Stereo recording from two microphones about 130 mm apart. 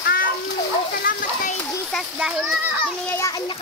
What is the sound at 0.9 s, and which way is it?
Splash, 90° left.